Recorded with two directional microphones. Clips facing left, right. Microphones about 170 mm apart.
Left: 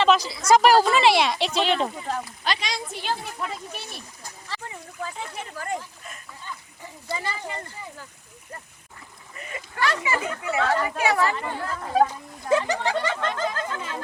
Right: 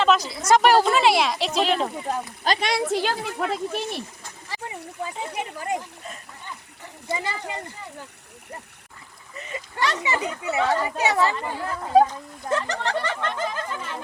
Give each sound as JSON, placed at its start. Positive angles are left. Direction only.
{"t": 0.0, "sound": "speech", "side_deg": 0}
{"t": 2.4, "sound": "speech", "side_deg": -45}
{"t": 2.6, "sound": "speech", "side_deg": -75}
{"t": 4.4, "sound": "speech", "side_deg": -15}
{"t": 7.1, "sound": "speech", "side_deg": -20}
{"t": 9.5, "sound": "speech", "side_deg": -25}
{"t": 12.0, "sound": "speech", "side_deg": 10}
{"t": 13.3, "sound": "a sound", "side_deg": -15}